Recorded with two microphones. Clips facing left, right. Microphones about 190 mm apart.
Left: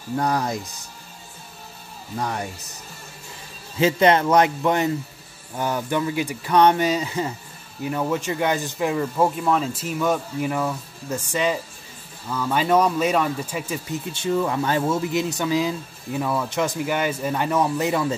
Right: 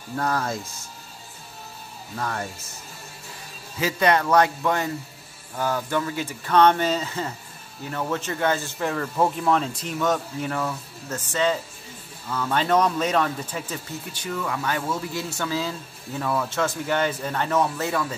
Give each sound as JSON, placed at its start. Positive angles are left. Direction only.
{"t": 0.2, "sound": "speech", "side_deg": 15}
{"t": 2.1, "sound": "speech", "side_deg": 15}
{"t": 3.8, "sound": "speech", "side_deg": 25}
{"t": 14.1, "sound": "speech", "side_deg": 25}